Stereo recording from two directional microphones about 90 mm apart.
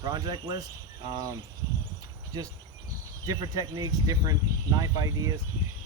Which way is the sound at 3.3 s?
45° right (ahead or behind).